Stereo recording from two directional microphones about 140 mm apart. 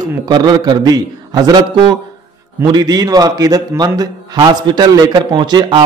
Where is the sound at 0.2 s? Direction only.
30° right (ahead or behind).